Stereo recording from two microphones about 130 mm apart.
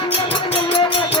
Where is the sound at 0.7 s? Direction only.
45° left (ahead or behind).